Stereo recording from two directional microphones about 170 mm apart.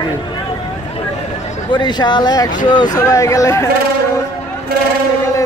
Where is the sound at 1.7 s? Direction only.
25° left (ahead or behind).